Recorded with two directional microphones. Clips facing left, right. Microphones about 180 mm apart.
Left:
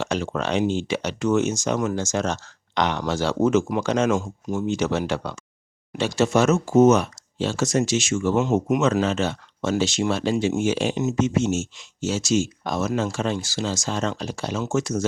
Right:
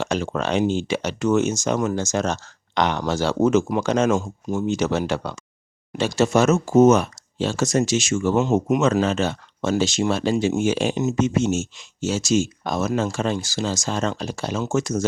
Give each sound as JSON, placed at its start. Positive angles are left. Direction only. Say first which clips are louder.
{"t": 0.0, "sound": "speech", "louder": "right 1 dB", "side_deg": -45}
{"t": 4.1, "sound": "speech", "louder": "right 1 dB", "side_deg": -30}
{"t": 4.7, "sound": "speech", "louder": "right 1 dB", "side_deg": -40}
{"t": 8.4, "sound": "speech", "louder": "right 1 dB", "side_deg": -30}
{"t": 8.8, "sound": "speech", "louder": "right 1 dB", "side_deg": -45}